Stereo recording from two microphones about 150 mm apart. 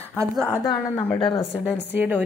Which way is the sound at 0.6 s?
20° left (ahead or behind).